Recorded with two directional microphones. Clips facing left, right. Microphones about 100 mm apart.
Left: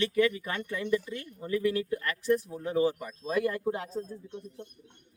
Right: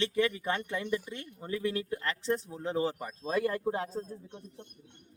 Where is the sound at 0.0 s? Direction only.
30° right (ahead or behind).